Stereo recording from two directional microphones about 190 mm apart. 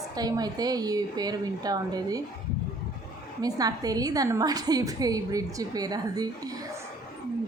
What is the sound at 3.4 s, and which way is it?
A woman's voice, 20° right (ahead or behind).